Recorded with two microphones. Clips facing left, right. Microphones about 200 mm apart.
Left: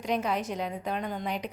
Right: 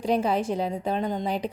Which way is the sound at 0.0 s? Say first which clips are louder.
Right 5 dB; 30° right (ahead or behind).